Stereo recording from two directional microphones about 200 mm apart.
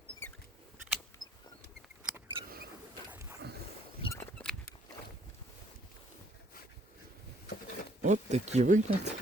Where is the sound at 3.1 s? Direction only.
15° right (ahead or behind).